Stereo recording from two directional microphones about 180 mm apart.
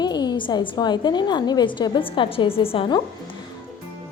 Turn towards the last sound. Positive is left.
turn(degrees=25)  # may be behind; listen again after turning